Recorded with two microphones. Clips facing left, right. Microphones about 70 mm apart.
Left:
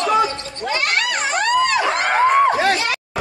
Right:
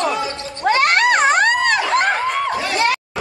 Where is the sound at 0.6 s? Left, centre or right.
Right.